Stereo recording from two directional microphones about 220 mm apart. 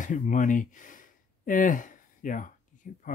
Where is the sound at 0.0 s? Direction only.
35° left (ahead or behind).